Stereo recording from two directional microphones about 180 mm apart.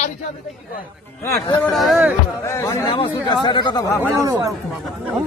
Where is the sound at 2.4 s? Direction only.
15° left (ahead or behind).